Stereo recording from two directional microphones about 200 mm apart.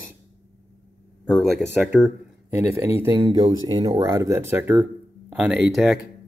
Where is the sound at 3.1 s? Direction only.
25° right (ahead or behind).